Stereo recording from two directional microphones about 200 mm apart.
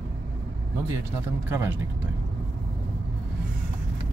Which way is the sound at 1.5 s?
10° right (ahead or behind).